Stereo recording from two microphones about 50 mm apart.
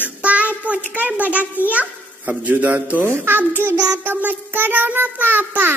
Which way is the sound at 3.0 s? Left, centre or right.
Right.